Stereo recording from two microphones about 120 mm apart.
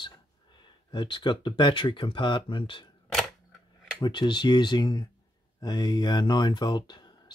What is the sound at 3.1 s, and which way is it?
Camera, 5° left (ahead or behind).